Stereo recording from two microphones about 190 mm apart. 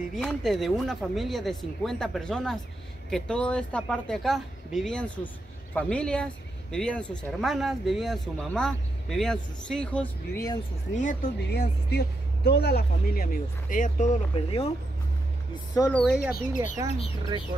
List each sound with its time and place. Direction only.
0.1 s speech: 5° left (ahead or behind)
11.3 s speech: 60° left (ahead or behind); by 14.7 s 30° left (ahead or behind)
15.9 s speech: 5° left (ahead or behind)
16.2 s speech: 50° left (ahead or behind)
16.6 s speech: 35° left (ahead or behind)